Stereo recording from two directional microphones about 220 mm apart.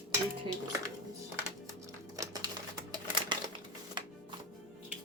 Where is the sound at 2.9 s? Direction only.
20° right (ahead or behind).